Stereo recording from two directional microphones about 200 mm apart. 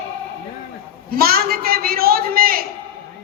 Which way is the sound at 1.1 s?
50° right (ahead or behind).